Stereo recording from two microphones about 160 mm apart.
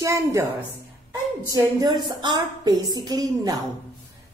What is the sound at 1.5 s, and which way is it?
A woman's voice, 25° right (ahead or behind).